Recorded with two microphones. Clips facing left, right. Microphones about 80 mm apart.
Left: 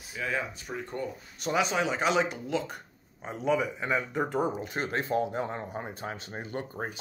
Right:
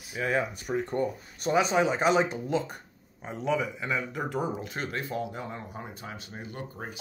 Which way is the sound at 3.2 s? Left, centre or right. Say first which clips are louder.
Left 1 dB; centre.